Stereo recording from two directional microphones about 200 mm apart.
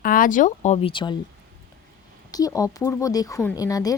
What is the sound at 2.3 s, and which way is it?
Speech, 15° left (ahead or behind).